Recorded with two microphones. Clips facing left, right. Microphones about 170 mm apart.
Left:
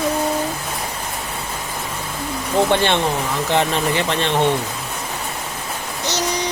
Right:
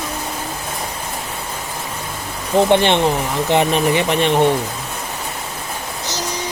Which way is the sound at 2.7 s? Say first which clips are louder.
Right 4 dB; 20° right (ahead or behind).